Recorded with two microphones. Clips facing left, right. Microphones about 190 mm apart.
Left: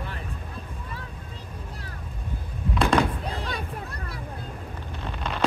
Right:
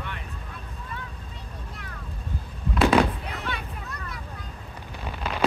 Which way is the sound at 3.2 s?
30° left (ahead or behind).